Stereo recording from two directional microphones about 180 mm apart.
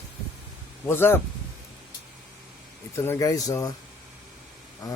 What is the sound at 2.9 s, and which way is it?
Speech, 15° left (ahead or behind).